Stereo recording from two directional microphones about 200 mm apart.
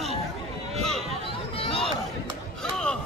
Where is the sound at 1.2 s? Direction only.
25° left (ahead or behind).